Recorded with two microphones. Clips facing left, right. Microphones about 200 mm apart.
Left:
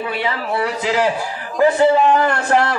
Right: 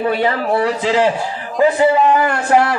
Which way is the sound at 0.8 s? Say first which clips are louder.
Right 2 dB; 25° right (ahead or behind).